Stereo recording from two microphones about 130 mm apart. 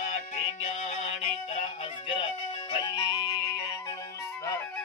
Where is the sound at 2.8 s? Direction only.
35° left (ahead or behind).